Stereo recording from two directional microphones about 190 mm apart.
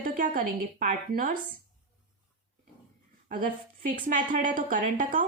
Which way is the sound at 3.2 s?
50° right (ahead or behind).